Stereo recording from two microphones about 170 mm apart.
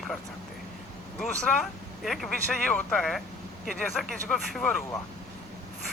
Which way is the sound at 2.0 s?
Centre (ahead or behind).